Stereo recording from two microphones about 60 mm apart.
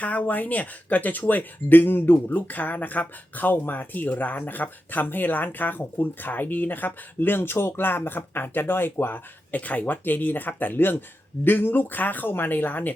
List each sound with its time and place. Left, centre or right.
0.0 s speech: left